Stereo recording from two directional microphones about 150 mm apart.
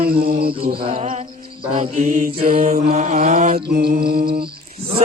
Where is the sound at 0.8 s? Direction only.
45° right (ahead or behind).